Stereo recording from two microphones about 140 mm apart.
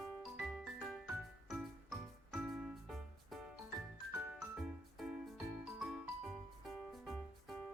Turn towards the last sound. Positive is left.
turn(degrees=5)  # may be behind; listen again after turning